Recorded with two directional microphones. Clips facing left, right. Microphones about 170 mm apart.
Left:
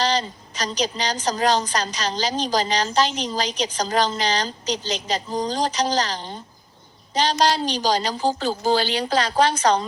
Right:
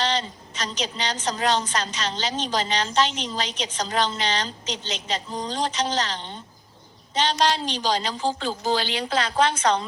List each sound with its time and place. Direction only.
0.0 s a woman's voice: 40° left (ahead or behind)